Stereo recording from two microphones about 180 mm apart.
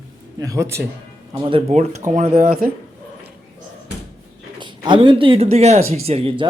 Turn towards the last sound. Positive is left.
turn(degrees=-30)  # may be behind; listen again after turning